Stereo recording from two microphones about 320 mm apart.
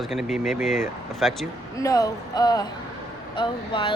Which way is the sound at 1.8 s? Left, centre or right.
Centre.